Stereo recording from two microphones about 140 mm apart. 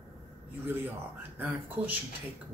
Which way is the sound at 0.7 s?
15° right (ahead or behind).